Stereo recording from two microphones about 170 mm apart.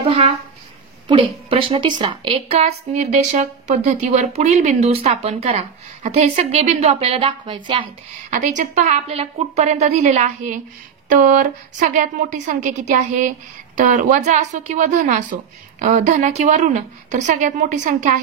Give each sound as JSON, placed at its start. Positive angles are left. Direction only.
{"t": 0.0, "sound": "a woman's voice", "side_deg": -35}
{"t": 8.3, "sound": "a woman's voice", "side_deg": -45}